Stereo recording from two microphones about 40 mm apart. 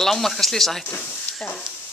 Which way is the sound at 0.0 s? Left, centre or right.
Centre.